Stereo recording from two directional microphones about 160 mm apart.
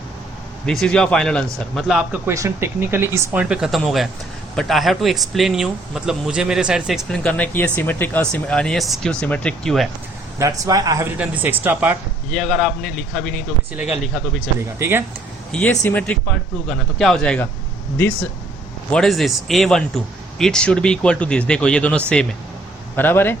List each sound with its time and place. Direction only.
0.6 s speech: 5° left (ahead or behind)
2.2 s speech: 15° right (ahead or behind); by 9.9 s centre (ahead or behind)
10.3 s speech: 20° right (ahead or behind)
12.3 s speech: centre (ahead or behind)
14.8 s speech: 15° right (ahead or behind)
15.5 s speech: 5° left (ahead or behind)
18.9 s speech: 5° left (ahead or behind)